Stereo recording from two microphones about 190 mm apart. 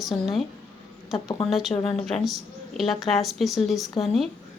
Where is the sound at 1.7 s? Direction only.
30° left (ahead or behind).